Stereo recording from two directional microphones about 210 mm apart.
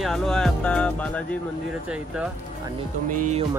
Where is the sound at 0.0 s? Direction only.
Centre (ahead or behind).